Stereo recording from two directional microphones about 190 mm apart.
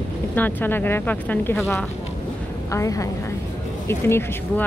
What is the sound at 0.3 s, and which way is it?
Speech, 10° left (ahead or behind).